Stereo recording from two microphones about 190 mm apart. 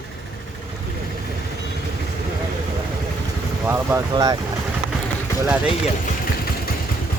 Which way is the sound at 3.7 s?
15° right (ahead or behind).